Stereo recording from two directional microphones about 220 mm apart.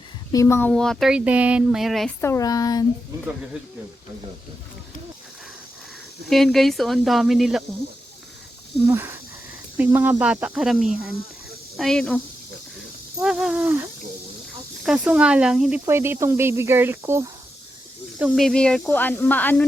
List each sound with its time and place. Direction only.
0.3 s speech: 10° left (ahead or behind)
2.2 s speech: 15° left (ahead or behind)
6.2 s speech: centre (ahead or behind)
8.9 s speech: 10° right (ahead or behind)
14.8 s speech: 5° right (ahead or behind)
18.2 s speech: centre (ahead or behind)